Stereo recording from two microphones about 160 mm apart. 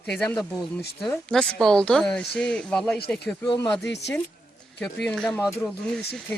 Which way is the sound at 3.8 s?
90° left.